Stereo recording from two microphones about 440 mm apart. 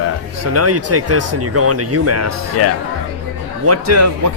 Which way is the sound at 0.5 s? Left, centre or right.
Right.